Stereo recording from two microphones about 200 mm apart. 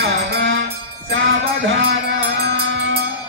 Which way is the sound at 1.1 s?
75° right (ahead or behind).